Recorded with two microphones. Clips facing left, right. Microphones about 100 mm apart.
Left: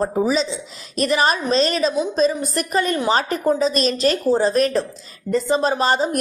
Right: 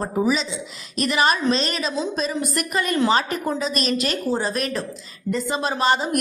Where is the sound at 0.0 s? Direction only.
35° left (ahead or behind).